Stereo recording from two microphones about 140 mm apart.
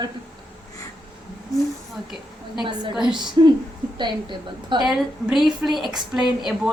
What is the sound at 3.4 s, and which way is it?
A woman's voice, 30° right (ahead or behind).